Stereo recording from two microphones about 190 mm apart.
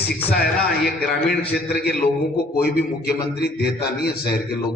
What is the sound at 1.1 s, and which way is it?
Speech, centre (ahead or behind).